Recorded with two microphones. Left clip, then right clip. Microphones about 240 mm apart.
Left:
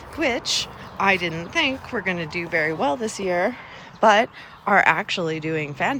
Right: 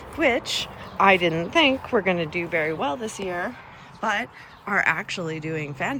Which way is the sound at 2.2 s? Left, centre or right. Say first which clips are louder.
Right 1 dB; left.